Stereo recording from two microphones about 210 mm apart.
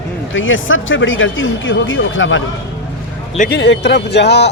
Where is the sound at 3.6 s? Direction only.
55° left (ahead or behind).